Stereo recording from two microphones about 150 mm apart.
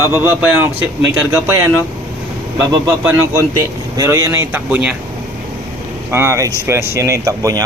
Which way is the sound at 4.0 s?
20° right (ahead or behind).